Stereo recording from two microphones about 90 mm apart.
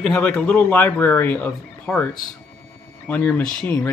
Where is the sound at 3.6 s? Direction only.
25° left (ahead or behind).